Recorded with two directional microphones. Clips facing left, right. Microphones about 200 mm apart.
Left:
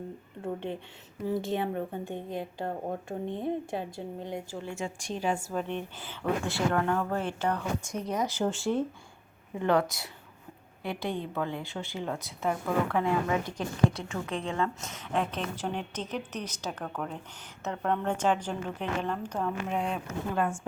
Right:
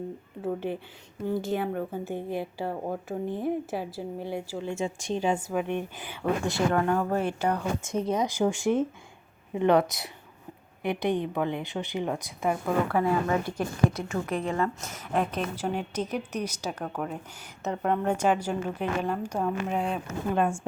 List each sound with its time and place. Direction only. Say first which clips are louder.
0.4 s a woman's voice: right 4 dB; 5° right (ahead or behind)
4.6 s a woman's voice: right 5 dB; 25° right (ahead or behind); by 20.1 s centre (ahead or behind)
20.3 s a woman's voice: right 4 dB; 25° right (ahead or behind)